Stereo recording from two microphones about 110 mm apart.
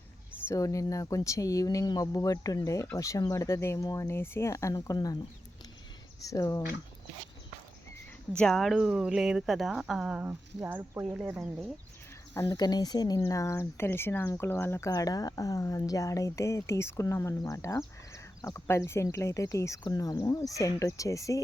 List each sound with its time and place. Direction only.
0.4 s speech: 30° left (ahead or behind)
6.2 s speech: 30° left (ahead or behind)
8.4 s speech: centre (ahead or behind); by 11.5 s 15° right (ahead or behind)
12.5 s speech: 40° left (ahead or behind); by 14.8 s 20° left (ahead or behind)
14.8 s speech: 35° left (ahead or behind)